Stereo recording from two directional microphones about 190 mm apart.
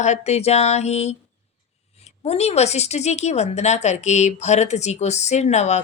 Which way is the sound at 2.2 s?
35° left (ahead or behind).